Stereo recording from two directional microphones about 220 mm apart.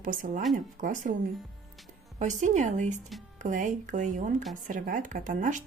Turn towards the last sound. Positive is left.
turn(degrees=-35)  # may be behind; listen again after turning